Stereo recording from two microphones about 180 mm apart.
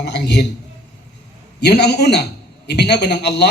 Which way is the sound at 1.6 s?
70° left (ahead or behind).